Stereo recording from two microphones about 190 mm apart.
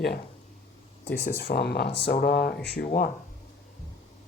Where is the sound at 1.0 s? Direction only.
60° left (ahead or behind).